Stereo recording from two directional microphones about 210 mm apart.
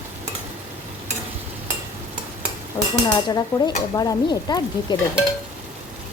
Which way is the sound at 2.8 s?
20° left (ahead or behind).